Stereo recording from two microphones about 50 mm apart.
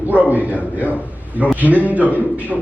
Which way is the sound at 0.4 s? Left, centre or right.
Left.